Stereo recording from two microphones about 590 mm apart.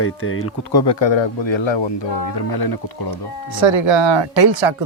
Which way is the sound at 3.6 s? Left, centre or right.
Right.